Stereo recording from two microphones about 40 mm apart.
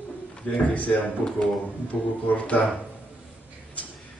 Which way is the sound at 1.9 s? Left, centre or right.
Centre.